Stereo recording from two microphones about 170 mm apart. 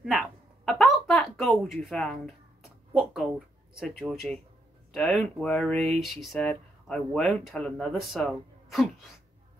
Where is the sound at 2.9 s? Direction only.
Centre (ahead or behind).